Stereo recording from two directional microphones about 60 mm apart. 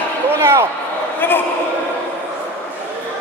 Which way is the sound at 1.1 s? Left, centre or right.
Left.